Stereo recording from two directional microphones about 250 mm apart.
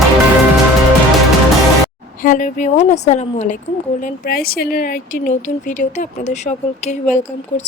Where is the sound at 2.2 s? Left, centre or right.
Left.